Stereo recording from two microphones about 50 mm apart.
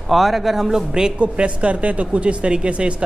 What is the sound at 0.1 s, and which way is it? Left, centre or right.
A man's voice, centre.